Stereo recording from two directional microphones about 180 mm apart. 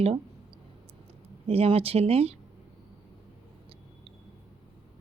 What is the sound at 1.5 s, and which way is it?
Speech, 35° right (ahead or behind).